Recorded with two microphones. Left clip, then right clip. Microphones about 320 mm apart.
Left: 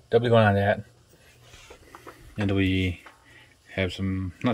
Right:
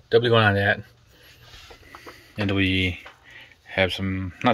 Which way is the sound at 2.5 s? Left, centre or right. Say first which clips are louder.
Right 3 dB; centre.